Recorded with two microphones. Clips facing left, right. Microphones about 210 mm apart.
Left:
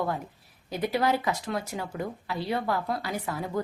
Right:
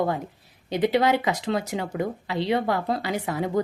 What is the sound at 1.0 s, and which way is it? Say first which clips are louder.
Speech: right 4 dB; 85° right.